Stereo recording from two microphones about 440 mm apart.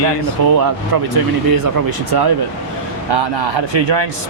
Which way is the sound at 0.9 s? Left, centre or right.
Right.